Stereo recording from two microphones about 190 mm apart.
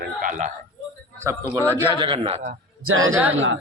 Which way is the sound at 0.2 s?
40° right (ahead or behind).